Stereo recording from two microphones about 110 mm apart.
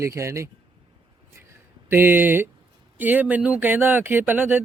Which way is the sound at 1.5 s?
20° right (ahead or behind).